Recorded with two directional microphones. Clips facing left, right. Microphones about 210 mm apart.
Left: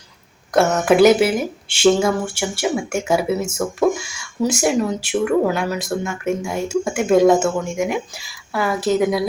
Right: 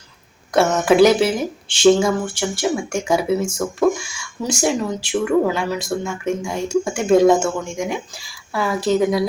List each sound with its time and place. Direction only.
0.5 s speech: centre (ahead or behind)